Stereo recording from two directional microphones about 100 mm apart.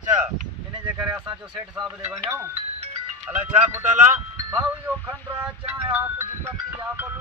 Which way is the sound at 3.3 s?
15° right (ahead or behind).